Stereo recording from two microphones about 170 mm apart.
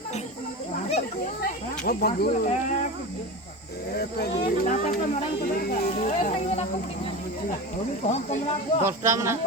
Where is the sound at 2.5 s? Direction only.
45° left (ahead or behind).